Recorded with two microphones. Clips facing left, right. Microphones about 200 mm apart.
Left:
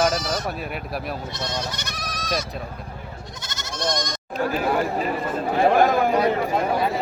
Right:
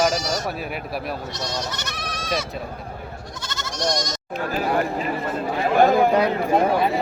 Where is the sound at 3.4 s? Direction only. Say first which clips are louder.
Right 4 dB; 20° left (ahead or behind).